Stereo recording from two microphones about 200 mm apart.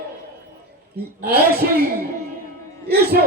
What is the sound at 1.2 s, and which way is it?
Speech, 50° right (ahead or behind).